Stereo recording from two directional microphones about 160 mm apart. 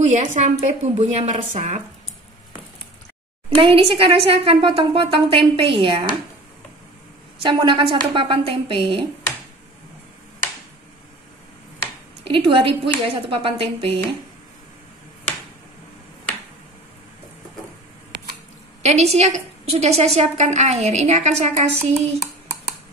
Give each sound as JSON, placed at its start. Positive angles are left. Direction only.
{"t": 0.0, "sound": "a woman's voice", "side_deg": -50}
{"t": 3.4, "sound": "a woman's voice", "side_deg": -35}
{"t": 7.4, "sound": "a woman's voice", "side_deg": -30}
{"t": 12.3, "sound": "a woman's voice", "side_deg": -35}
{"t": 18.1, "sound": "a sound", "side_deg": -90}
{"t": 18.8, "sound": "a woman's voice", "side_deg": -45}